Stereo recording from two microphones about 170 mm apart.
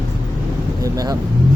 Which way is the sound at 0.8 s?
20° right (ahead or behind).